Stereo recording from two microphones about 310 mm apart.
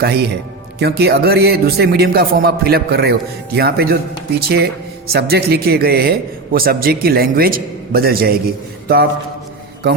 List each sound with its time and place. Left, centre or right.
0.0 s a man's voice: right